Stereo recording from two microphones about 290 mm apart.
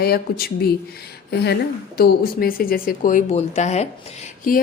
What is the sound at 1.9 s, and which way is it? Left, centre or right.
A woman's voice, left.